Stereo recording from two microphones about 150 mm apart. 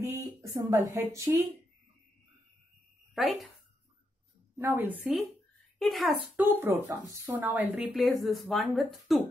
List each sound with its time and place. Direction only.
0.0 s speech: 20° right (ahead or behind)
3.2 s speech: centre (ahead or behind)
4.6 s a woman's voice: 15° right (ahead or behind)
5.8 s speech: centre (ahead or behind)
6.3 s a woman's voice: 10° right (ahead or behind)